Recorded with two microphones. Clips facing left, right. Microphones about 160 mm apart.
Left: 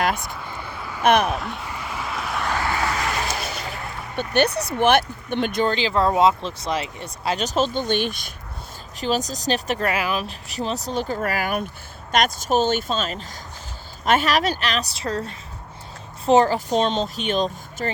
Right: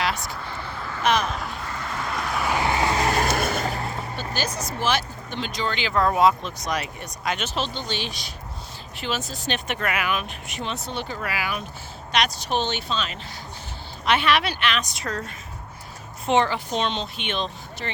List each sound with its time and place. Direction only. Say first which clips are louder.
0.4 s vehicle: even; 15° left (ahead or behind)
1.0 s speech: left 5 dB; 60° left (ahead or behind)
1.3 s speech: left 4 dB; centre (ahead or behind)
1.6 s vehicle: even; 10° left (ahead or behind)
2.5 s vehicle: right 2 dB; 20° right (ahead or behind); by 4.0 s 35° right (ahead or behind)
4.4 s speech: left 10 dB; 65° left (ahead or behind)
5.7 s speech: left 3 dB; 30° left (ahead or behind); by 8.3 s 50° left (ahead or behind)
9.0 s a woman's voice: left 6 dB; 40° left (ahead or behind)